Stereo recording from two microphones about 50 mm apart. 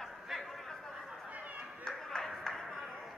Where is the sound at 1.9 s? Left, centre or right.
Centre.